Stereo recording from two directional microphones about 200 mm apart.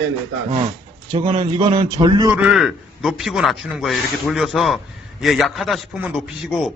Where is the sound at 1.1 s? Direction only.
35° right (ahead or behind).